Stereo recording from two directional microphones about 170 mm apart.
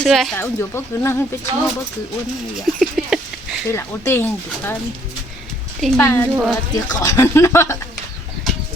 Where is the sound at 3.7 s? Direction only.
15° left (ahead or behind).